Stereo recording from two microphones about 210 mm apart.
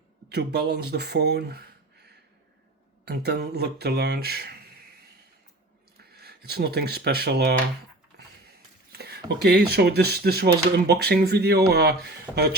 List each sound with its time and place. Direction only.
0.3 s speech: 50° right (ahead or behind)
3.0 s speech: 50° right (ahead or behind)
6.1 s speech: 50° right (ahead or behind)
8.9 s speech: 50° right (ahead or behind)
12.3 s speech: 5° left (ahead or behind)